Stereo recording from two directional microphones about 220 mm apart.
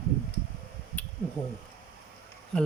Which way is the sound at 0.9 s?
5° left (ahead or behind).